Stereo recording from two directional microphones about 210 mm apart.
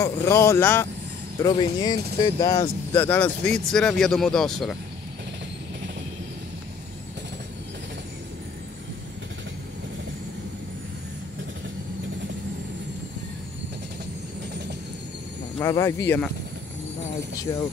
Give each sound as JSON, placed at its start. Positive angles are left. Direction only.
{"t": 0.0, "sound": "speech", "side_deg": 15}
{"t": 15.6, "sound": "speech", "side_deg": 15}
{"t": 17.5, "sound": "speech", "side_deg": 15}